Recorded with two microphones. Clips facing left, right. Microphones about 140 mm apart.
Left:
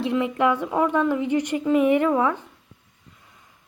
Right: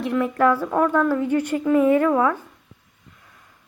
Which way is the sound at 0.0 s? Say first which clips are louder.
Right 2 dB; 25° left (ahead or behind).